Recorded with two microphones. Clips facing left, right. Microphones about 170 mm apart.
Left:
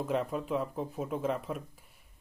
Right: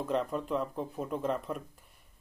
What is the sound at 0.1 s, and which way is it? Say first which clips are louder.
Speech: right 1 dB; 5° left (ahead or behind).